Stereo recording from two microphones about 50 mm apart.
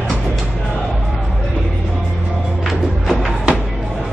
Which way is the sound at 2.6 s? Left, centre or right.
Centre.